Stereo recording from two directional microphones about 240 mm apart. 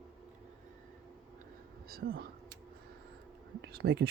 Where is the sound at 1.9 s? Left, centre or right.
Right.